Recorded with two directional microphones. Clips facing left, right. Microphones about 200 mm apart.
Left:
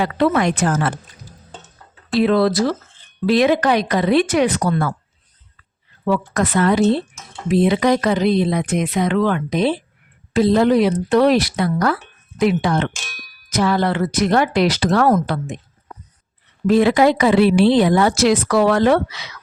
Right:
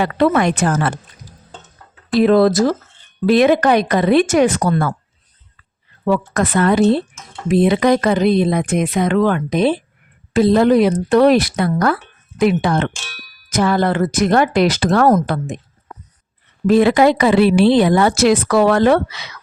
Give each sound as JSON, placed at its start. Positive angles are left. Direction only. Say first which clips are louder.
{"t": 0.0, "sound": "a woman's voice", "louder": "right 2 dB", "side_deg": -55}
{"t": 2.1, "sound": "speech", "louder": "right 4 dB", "side_deg": -45}
{"t": 6.1, "sound": "speech", "louder": "right 2 dB", "side_deg": -50}
{"t": 16.6, "sound": "a woman's voice", "louder": "right 2 dB", "side_deg": -55}